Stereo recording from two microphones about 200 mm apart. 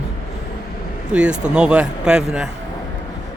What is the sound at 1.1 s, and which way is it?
Speech, 5° right (ahead or behind).